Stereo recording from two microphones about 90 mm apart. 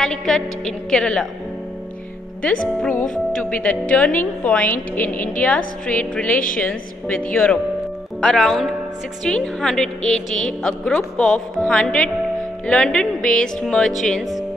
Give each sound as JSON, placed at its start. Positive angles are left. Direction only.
{"t": 0.0, "sound": "a woman's voice", "side_deg": 5}
{"t": 2.4, "sound": "a woman's voice", "side_deg": 15}
{"t": 8.2, "sound": "a woman's voice", "side_deg": 5}